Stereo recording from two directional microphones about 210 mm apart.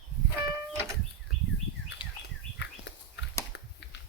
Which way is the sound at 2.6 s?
55° left (ahead or behind).